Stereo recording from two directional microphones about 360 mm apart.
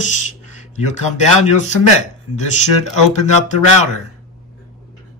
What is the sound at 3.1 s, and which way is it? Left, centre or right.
Speech, centre.